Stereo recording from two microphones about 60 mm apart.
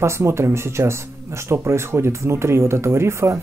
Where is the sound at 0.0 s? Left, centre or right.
Right.